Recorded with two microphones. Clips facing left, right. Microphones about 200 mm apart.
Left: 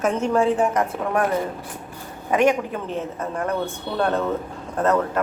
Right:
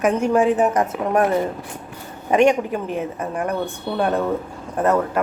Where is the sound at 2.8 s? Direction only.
15° right (ahead or behind).